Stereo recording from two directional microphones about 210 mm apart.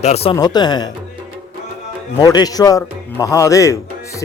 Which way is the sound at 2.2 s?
20° left (ahead or behind).